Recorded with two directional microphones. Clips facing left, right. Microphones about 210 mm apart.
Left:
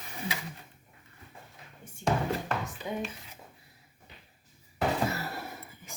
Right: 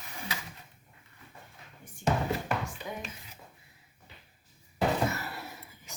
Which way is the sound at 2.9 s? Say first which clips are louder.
Left 9 dB; 25° left (ahead or behind).